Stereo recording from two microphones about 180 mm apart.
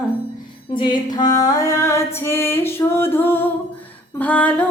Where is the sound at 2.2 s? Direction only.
15° left (ahead or behind).